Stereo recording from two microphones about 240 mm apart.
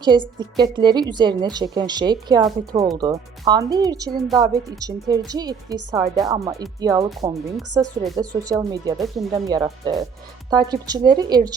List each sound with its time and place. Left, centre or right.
0.0 s a woman's voice: centre
9.0 s speech: centre
9.6 s a woman's voice: centre